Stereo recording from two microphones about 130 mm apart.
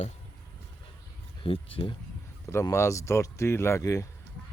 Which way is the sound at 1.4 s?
45° left (ahead or behind).